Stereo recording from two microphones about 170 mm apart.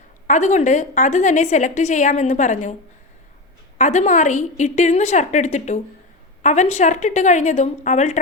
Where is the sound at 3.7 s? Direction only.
45° left (ahead or behind).